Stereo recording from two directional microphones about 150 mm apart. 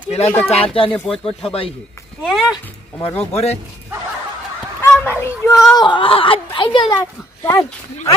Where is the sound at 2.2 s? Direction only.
Centre (ahead or behind).